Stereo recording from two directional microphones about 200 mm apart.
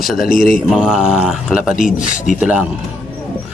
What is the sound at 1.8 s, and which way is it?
Speech, 40° left (ahead or behind).